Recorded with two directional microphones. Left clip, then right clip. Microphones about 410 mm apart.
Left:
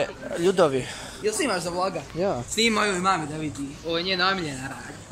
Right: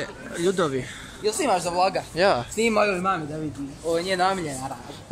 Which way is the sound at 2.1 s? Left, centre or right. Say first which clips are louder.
Right 6 dB; right.